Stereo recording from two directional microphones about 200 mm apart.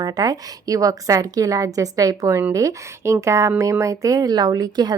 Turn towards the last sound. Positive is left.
turn(degrees=-20)  # may be behind; listen again after turning